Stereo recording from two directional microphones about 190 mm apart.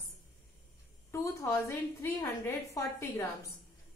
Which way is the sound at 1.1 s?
15° left (ahead or behind).